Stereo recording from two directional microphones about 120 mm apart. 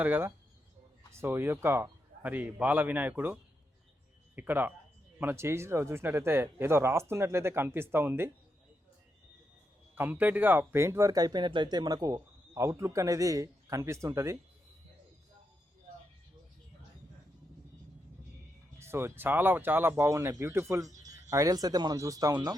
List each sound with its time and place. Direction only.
0.0 s a man's voice: 20° right (ahead or behind)
4.4 s a man's voice: 15° right (ahead or behind)
9.9 s speech: 15° right (ahead or behind)
18.8 s a man's voice: 20° right (ahead or behind)